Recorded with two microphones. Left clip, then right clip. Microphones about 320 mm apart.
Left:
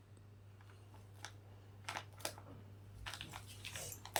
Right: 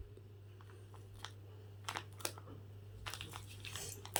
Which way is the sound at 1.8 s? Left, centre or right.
Centre.